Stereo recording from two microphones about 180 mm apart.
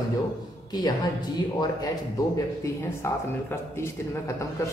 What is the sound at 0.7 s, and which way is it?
Speech, 20° left (ahead or behind).